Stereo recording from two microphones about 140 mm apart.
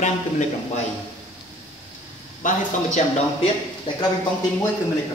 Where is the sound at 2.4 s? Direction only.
65° left (ahead or behind).